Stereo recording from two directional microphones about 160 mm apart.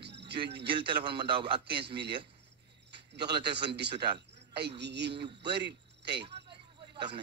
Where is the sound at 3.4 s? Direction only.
90° right.